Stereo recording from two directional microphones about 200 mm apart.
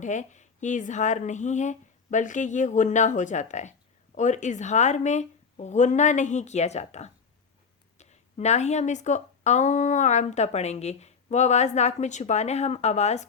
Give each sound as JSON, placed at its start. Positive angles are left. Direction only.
{"t": 0.0, "sound": "speech", "side_deg": 35}